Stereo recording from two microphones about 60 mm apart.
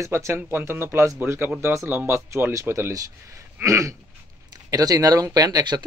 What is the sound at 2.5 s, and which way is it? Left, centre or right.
Speech, right.